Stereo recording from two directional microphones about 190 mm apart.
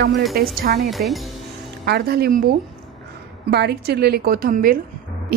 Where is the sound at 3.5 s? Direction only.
60° right (ahead or behind).